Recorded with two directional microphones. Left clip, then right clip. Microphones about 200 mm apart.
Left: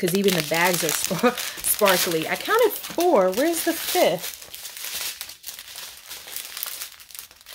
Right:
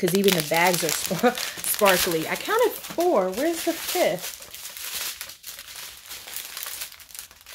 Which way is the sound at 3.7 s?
50° left (ahead or behind).